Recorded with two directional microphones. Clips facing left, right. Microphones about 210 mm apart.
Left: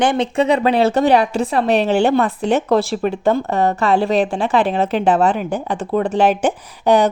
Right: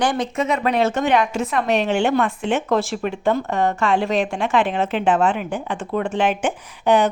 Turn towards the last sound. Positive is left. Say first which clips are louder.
# left 3 dB
turn(degrees=40)  # may be behind; listen again after turning